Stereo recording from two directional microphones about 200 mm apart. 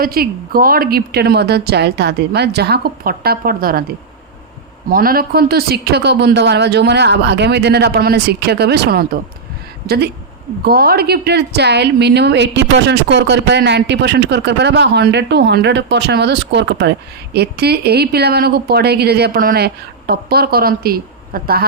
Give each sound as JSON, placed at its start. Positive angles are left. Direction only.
{"t": 0.0, "sound": "a woman's voice", "side_deg": -45}
{"t": 4.9, "sound": "a woman's voice", "side_deg": -45}